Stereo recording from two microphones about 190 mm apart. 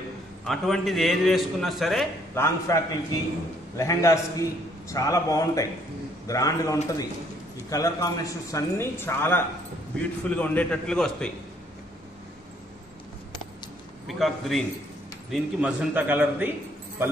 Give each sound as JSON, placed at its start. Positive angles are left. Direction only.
{"t": 0.5, "sound": "a man's voice", "side_deg": 0}
{"t": 2.3, "sound": "a man's voice", "side_deg": 15}
{"t": 14.0, "sound": "a man's voice", "side_deg": 0}